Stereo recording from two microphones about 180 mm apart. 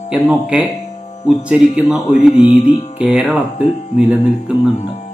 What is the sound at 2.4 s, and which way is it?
Music, 40° left (ahead or behind).